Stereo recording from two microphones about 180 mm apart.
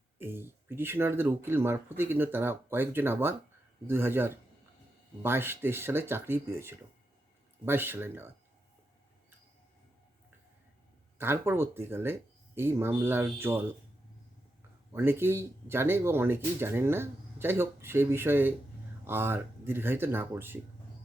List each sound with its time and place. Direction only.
0.2 s speech: 10° right (ahead or behind)
11.2 s speech: 15° right (ahead or behind)
14.9 s speech: 10° right (ahead or behind)